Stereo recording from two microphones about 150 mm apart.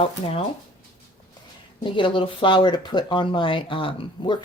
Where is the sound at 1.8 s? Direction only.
35° left (ahead or behind).